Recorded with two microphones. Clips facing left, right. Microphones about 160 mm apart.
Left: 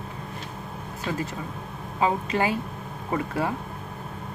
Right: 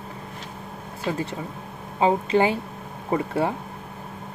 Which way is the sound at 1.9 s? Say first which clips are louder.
Right 5 dB; 25° right (ahead or behind).